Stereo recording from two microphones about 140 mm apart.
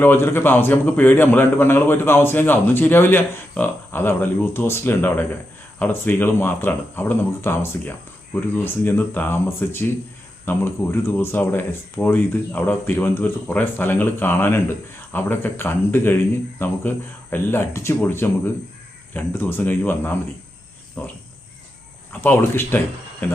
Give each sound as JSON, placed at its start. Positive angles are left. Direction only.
{"t": 0.0, "sound": "speech", "side_deg": 15}
{"t": 17.3, "sound": "speech", "side_deg": 15}
{"t": 22.2, "sound": "speech", "side_deg": 15}